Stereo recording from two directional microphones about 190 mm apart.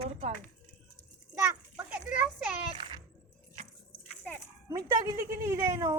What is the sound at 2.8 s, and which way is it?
Music, 25° right (ahead or behind).